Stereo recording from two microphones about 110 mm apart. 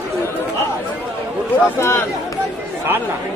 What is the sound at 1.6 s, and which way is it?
Speech, 25° left (ahead or behind).